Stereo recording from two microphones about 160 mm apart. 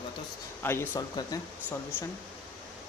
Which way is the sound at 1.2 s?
25° left (ahead or behind).